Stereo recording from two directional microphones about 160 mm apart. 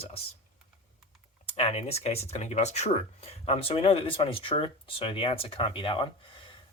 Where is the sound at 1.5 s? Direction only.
40° left (ahead or behind).